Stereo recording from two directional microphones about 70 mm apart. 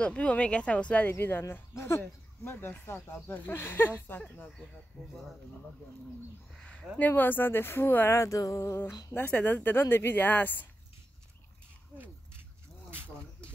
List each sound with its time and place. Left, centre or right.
0.0 s speech: centre
1.5 s speech: left
6.6 s a sound: centre
7.0 s a woman's voice: left
8.2 s music: left
9.1 s a woman's voice: left
12.9 s a sound: right